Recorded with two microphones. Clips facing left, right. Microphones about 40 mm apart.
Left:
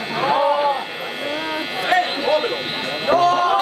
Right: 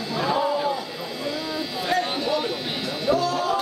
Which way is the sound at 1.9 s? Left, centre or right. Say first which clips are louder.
Left 6 dB; left.